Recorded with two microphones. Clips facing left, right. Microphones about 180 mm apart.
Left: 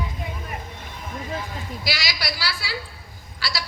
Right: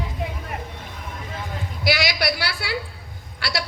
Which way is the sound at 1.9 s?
60° right (ahead or behind).